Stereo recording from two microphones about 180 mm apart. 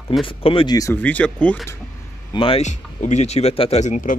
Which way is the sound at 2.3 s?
30° left (ahead or behind).